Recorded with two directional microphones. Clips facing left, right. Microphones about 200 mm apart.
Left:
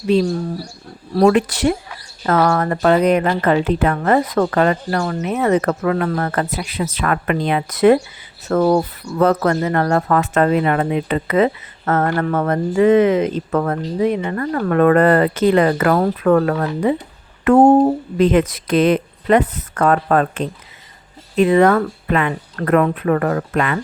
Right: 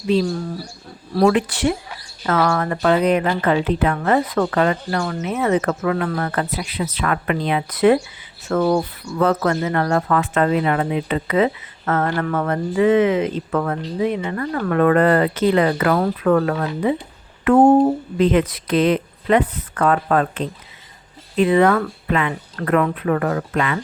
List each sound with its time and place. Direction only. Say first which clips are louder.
1.2 s speech: left 3 dB; 40° left (ahead or behind)
17.4 s a sound: left 2 dB; 40° left (ahead or behind)
18.2 s speech: left 2 dB; 50° left (ahead or behind)